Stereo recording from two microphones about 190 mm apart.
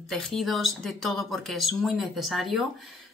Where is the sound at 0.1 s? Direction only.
Centre (ahead or behind).